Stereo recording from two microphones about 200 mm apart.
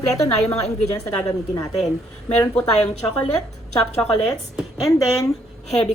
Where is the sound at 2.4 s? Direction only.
5° left (ahead or behind).